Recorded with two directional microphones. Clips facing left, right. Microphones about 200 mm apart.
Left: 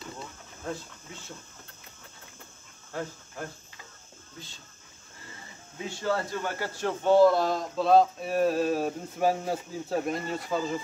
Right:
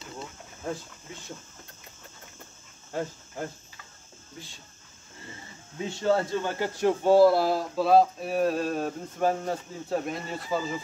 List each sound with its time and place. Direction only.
2.9 s speech: 15° right (ahead or behind)
5.9 s speech: 25° right (ahead or behind); by 10.8 s centre (ahead or behind)